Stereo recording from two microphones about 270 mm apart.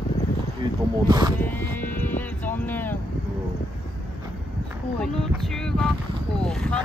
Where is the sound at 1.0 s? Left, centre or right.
Centre.